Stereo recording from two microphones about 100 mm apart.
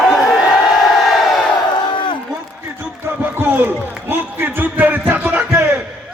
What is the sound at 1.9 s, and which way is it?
Run, 50° left (ahead or behind).